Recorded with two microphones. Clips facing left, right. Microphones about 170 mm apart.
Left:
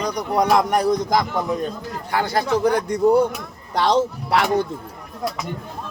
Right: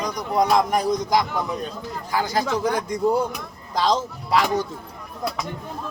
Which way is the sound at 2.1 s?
60° left (ahead or behind).